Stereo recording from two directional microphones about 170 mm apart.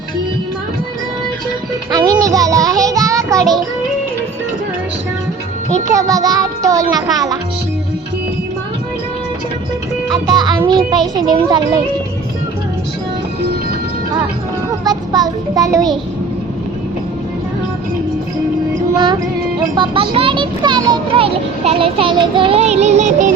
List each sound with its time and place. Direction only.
1.9 s a child's voice: 20° right (ahead or behind)
2.2 s child singing: 20° right (ahead or behind)
6.0 s music: 20° right (ahead or behind)
10.1 s music: 25° right (ahead or behind)
10.6 s a child's voice: 25° right (ahead or behind)
14.8 s a child's voice: 25° right (ahead or behind)
19.7 s a child's voice: 30° right (ahead or behind)